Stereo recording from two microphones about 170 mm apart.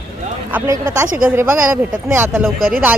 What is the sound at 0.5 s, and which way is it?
Speech, 20° right (ahead or behind).